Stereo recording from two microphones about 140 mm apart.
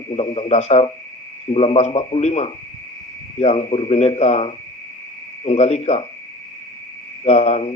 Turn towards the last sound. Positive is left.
turn(degrees=50)  # may be behind; listen again after turning